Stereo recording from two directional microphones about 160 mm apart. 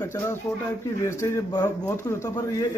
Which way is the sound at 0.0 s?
15° left (ahead or behind).